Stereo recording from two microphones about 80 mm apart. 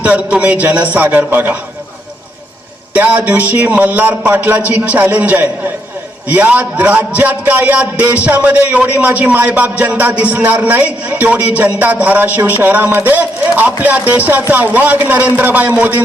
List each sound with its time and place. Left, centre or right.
0.0 s a man's voice: centre
2.9 s a man's voice: centre